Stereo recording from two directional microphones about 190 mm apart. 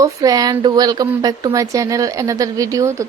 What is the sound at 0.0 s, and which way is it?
A woman's voice, 20° right (ahead or behind).